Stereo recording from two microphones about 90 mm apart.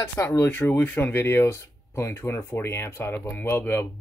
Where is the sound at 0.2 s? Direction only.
35° left (ahead or behind).